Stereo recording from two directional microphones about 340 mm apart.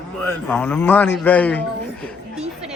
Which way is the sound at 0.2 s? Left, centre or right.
Centre.